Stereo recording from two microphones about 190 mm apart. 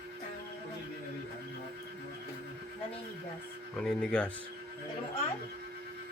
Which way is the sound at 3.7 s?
5° left (ahead or behind).